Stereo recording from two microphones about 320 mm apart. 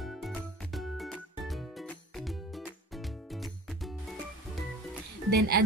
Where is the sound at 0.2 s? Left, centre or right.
Centre.